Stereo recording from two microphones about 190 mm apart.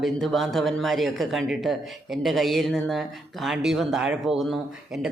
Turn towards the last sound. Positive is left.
turn(degrees=0)  # may be behind; listen again after turning